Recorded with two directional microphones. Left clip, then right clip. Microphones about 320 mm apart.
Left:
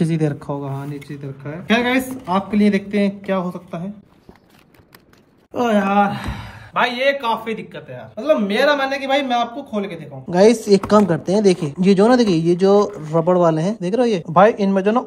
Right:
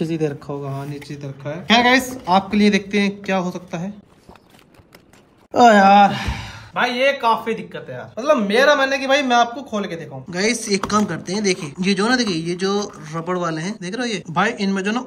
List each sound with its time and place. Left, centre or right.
0.0 s speech: centre
1.0 s speech: centre
5.5 s speech: centre
10.3 s speech: centre